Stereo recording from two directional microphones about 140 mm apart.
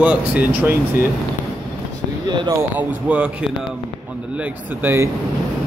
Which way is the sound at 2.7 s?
10° right (ahead or behind).